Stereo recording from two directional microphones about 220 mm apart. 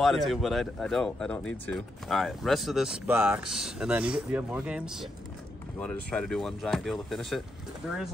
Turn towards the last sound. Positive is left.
turn(degrees=0)  # may be behind; listen again after turning